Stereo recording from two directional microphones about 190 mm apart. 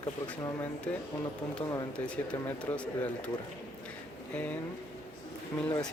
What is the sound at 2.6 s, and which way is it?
Speech, 10° left (ahead or behind).